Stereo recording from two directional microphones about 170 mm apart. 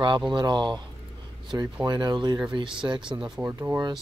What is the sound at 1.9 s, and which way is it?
Speech, 25° right (ahead or behind).